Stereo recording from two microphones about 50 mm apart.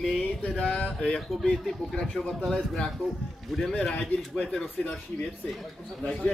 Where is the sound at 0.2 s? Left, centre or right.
Left.